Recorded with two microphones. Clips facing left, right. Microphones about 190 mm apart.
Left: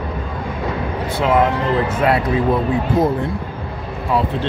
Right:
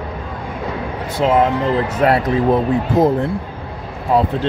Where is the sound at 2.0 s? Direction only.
40° right (ahead or behind).